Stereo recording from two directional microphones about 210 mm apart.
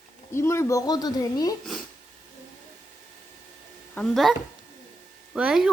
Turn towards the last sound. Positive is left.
turn(degrees=-5)  # may be behind; listen again after turning